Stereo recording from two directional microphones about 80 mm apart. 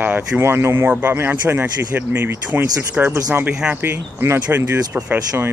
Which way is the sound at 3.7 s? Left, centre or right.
Right.